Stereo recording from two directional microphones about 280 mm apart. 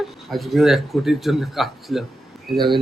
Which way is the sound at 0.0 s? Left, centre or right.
Centre.